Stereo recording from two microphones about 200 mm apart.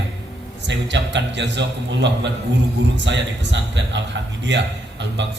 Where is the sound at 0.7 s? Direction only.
60° right (ahead or behind).